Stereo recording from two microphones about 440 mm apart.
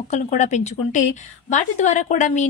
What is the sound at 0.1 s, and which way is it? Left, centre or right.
A woman's voice, centre.